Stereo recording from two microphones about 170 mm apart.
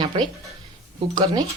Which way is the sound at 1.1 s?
25° right (ahead or behind).